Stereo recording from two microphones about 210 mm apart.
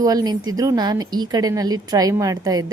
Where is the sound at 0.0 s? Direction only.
15° right (ahead or behind).